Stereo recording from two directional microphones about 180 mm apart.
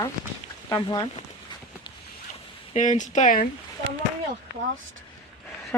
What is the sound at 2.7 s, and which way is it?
Speech, 45° left (ahead or behind).